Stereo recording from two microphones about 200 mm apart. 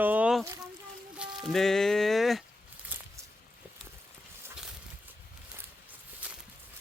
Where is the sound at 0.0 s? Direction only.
10° right (ahead or behind).